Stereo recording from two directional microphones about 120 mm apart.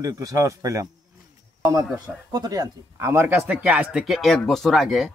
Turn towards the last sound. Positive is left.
turn(degrees=0)  # may be behind; listen again after turning